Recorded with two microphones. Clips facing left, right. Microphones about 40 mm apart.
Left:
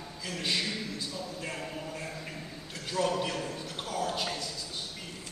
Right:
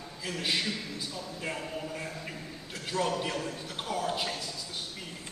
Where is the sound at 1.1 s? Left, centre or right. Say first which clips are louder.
Right 1 dB; centre.